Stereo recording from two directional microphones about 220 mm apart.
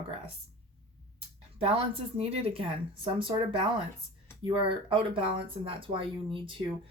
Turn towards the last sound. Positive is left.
turn(degrees=-25)  # may be behind; listen again after turning